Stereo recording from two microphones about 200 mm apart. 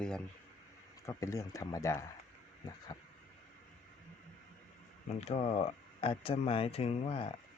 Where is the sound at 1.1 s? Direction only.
15° left (ahead or behind).